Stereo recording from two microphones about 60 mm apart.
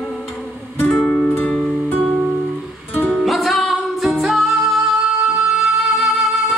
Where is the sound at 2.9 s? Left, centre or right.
Left.